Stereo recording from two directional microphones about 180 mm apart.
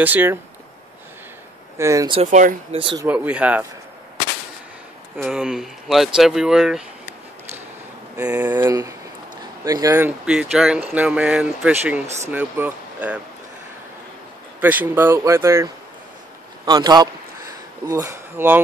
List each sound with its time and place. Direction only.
0.0 s speech: 10° right (ahead or behind)
1.8 s speech: 15° right (ahead or behind)
2.3 s speech: 45° right (ahead or behind)
2.8 s a man's voice: 25° right (ahead or behind)
3.1 s speech: 5° right (ahead or behind)
5.1 s speech: 5° right (ahead or behind)
8.3 s speech: 10° right (ahead or behind)
14.6 s a man's voice: 10° right (ahead or behind)